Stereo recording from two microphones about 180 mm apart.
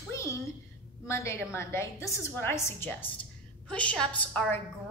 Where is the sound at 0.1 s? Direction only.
15° left (ahead or behind).